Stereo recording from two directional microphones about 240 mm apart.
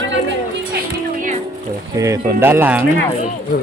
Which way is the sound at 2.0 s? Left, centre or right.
Centre.